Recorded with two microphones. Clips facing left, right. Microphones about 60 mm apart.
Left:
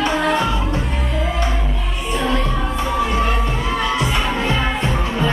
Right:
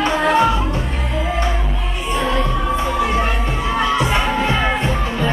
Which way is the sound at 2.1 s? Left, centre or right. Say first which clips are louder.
Right 1 dB; right.